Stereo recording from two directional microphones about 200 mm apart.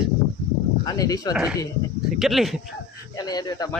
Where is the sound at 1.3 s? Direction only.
5° right (ahead or behind).